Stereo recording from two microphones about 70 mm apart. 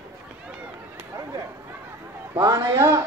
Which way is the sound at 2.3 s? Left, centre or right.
Right.